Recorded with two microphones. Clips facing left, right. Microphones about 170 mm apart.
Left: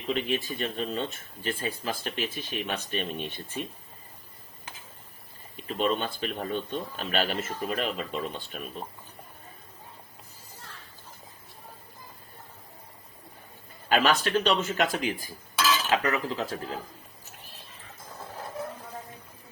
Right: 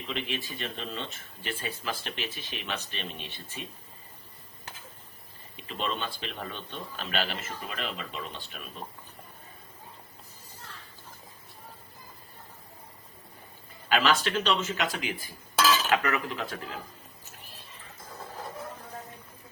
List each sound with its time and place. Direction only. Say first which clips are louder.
0.1 s speech: left 7 dB; 45° left (ahead or behind)
5.6 s speech: left 6 dB; 45° left (ahead or behind)
13.9 s speech: left 2 dB; 45° left (ahead or behind)